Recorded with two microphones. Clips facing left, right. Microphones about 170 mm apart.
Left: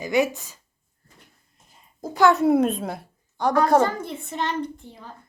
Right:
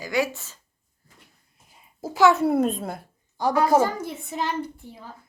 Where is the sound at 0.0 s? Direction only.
20° left (ahead or behind).